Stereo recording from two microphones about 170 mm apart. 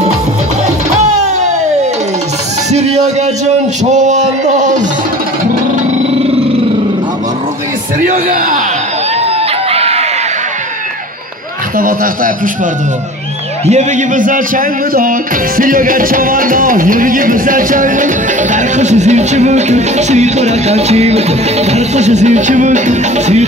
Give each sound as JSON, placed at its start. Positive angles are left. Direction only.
{"t": 0.9, "sound": "music", "side_deg": -45}
{"t": 2.7, "sound": "a man's voice", "side_deg": -40}
{"t": 8.1, "sound": "a man's voice", "side_deg": -55}
{"t": 9.2, "sound": "chicken", "side_deg": -35}
{"t": 11.8, "sound": "a man's voice", "side_deg": -55}
{"t": 13.7, "sound": "speech", "side_deg": -45}